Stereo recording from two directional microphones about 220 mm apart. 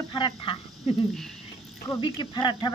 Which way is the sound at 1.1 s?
Centre (ahead or behind).